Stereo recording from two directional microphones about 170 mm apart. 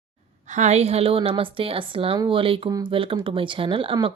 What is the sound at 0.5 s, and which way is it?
A woman's voice, 45° right (ahead or behind).